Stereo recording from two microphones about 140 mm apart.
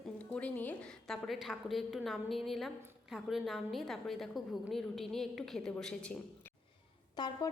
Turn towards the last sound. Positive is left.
turn(degrees=30)  # may be behind; listen again after turning